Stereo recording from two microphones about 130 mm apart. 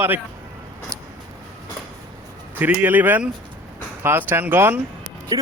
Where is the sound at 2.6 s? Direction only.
15° right (ahead or behind).